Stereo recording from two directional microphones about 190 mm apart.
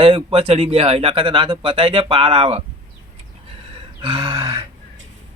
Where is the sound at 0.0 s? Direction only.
25° right (ahead or behind).